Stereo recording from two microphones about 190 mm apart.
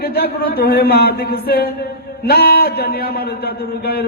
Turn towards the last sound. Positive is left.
turn(degrees=55)  # may be behind; listen again after turning